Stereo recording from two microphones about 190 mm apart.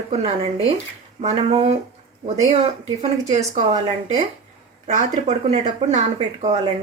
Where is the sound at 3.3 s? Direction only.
35° right (ahead or behind).